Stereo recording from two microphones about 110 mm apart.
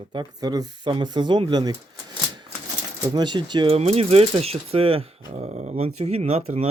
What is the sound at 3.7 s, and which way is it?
Speech, 70° right (ahead or behind).